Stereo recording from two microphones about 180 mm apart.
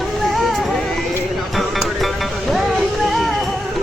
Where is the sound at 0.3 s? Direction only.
Centre (ahead or behind).